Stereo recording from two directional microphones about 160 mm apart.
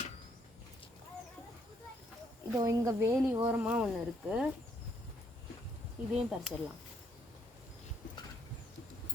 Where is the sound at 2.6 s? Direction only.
20° right (ahead or behind).